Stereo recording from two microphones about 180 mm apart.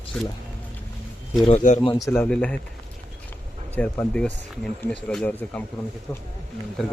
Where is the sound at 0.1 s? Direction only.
5° left (ahead or behind).